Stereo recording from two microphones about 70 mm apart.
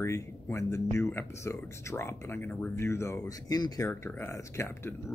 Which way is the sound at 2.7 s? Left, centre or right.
Left.